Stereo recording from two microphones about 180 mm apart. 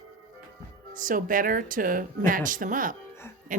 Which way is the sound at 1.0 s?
50° right (ahead or behind).